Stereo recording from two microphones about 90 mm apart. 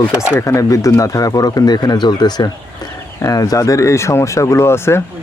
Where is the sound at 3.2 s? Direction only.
40° left (ahead or behind).